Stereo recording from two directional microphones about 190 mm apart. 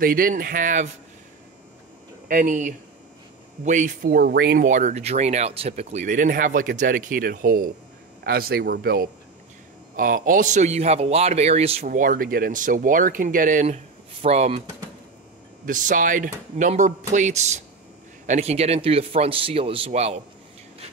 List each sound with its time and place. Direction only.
0.0 s speech: 50° right (ahead or behind)
2.2 s a man's voice: 45° right (ahead or behind)
11.9 s a man's voice: 45° right (ahead or behind)
15.6 s a man's voice: 45° right (ahead or behind)